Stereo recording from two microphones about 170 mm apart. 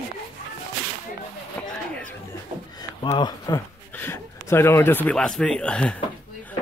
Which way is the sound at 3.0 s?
25° left (ahead or behind).